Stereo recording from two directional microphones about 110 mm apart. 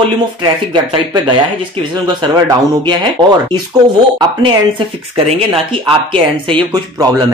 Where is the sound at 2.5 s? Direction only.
45° right (ahead or behind).